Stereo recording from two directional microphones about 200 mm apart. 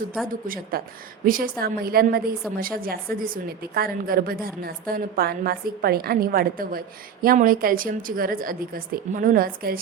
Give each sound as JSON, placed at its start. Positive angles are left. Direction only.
{"t": 0.3, "sound": "a woman's voice", "side_deg": -45}